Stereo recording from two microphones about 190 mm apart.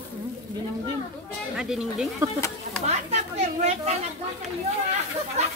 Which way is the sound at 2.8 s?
35° right (ahead or behind).